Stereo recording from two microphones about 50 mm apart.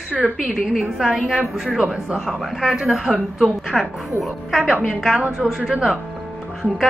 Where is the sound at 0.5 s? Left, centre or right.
Centre.